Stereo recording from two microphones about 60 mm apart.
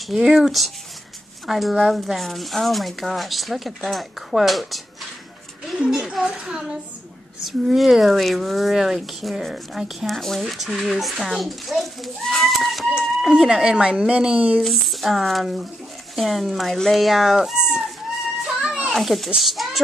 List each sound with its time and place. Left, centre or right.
0.1 s speech: centre
5.9 s speech: centre
14.6 s speech: centre
18.6 s children playing: centre
18.9 s speech: centre